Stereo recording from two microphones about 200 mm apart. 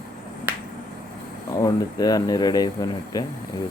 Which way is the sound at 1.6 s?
20° left (ahead or behind).